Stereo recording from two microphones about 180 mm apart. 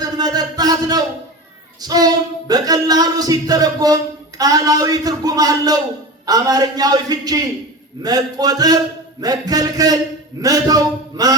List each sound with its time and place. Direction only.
0.0 s speech: 20° right (ahead or behind)